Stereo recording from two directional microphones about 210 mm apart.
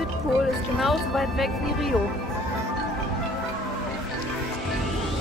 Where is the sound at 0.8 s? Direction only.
Centre (ahead or behind).